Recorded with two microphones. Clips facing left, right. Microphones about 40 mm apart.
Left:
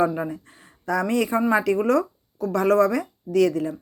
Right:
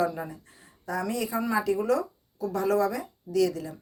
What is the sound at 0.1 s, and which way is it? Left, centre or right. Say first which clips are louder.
Speech: left 8 dB; left.